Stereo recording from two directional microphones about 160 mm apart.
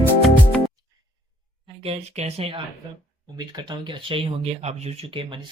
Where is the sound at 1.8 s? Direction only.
35° right (ahead or behind).